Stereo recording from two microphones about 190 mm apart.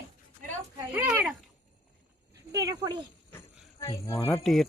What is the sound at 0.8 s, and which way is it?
Speech, 10° right (ahead or behind).